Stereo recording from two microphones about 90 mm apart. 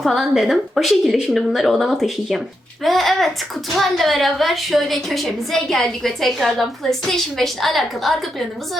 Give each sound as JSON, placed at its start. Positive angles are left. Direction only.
{"t": 0.0, "sound": "a woman's voice", "side_deg": 0}